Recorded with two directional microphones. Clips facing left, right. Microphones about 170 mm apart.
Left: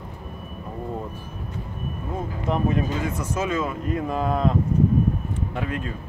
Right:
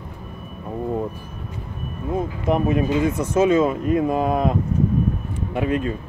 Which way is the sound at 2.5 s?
15° right (ahead or behind).